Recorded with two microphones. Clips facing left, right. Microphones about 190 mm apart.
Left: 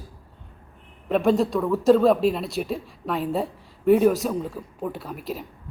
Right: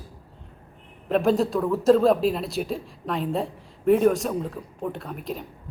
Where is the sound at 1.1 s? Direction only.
Centre (ahead or behind).